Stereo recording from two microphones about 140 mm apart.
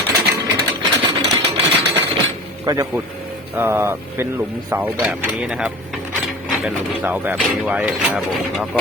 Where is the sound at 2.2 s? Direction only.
30° right (ahead or behind).